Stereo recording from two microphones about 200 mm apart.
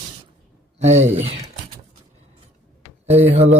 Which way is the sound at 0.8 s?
35° right (ahead or behind).